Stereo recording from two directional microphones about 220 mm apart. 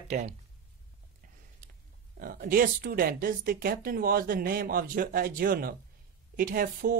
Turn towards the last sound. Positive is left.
turn(degrees=-40)  # may be behind; listen again after turning